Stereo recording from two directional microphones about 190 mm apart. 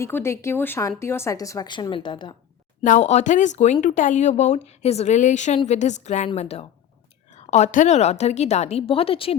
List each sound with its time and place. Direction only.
0.0 s speech: 15° left (ahead or behind)
2.8 s speech: 40° left (ahead or behind)